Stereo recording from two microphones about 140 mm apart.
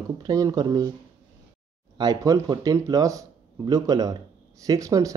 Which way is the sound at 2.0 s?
25° right (ahead or behind).